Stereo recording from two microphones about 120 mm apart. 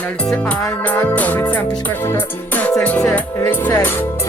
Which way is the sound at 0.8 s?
15° left (ahead or behind).